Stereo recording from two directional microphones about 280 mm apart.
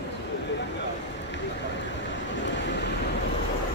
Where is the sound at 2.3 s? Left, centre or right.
Left.